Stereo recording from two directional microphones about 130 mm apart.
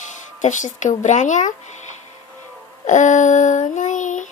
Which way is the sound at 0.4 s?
70° left (ahead or behind).